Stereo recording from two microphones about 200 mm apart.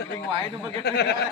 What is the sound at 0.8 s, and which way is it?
Speech, 60° left (ahead or behind).